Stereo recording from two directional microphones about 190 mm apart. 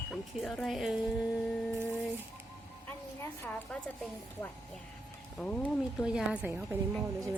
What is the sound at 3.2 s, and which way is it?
Speech, 10° left (ahead or behind).